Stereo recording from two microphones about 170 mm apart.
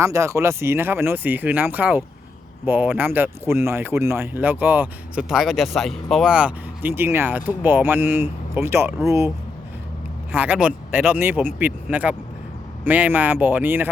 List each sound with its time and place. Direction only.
0.0 s speech: 15° right (ahead or behind)
10.3 s speech: 10° right (ahead or behind)